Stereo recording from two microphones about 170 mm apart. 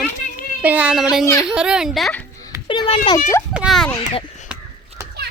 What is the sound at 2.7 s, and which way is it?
Speech, 30° left (ahead or behind).